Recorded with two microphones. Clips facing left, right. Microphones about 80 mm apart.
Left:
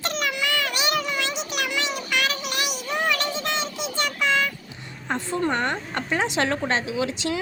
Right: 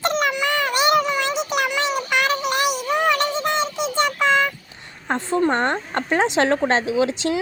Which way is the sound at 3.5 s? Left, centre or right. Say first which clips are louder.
Right 6 dB; right.